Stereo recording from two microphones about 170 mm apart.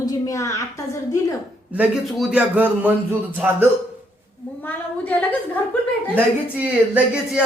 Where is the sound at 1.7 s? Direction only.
5° right (ahead or behind).